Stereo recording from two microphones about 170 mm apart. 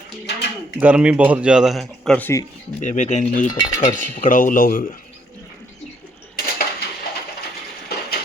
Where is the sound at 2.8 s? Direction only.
45° left (ahead or behind).